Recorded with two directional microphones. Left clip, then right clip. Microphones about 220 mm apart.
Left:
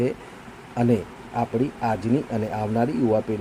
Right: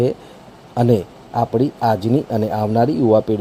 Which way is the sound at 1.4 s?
30° right (ahead or behind).